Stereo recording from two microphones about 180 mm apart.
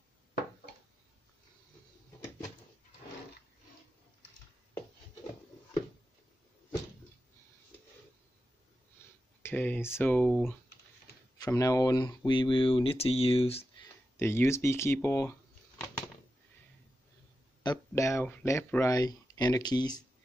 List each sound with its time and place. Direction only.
9.4 s speech: 10° left (ahead or behind)
11.3 s speech: 20° left (ahead or behind)
14.1 s speech: 15° left (ahead or behind)
17.6 s speech: 15° left (ahead or behind)